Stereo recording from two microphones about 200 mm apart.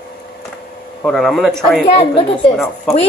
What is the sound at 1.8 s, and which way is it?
Speech, 30° left (ahead or behind).